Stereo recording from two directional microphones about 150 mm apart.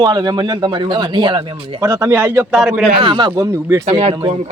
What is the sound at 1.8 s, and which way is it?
Speech, 20° right (ahead or behind).